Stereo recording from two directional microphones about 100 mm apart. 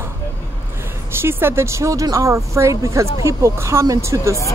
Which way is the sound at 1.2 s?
25° right (ahead or behind).